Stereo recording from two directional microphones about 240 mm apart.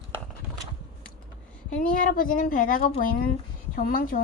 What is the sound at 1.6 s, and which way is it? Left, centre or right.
Speech, left.